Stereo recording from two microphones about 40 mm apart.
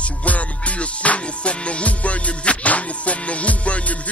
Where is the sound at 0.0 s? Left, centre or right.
Left.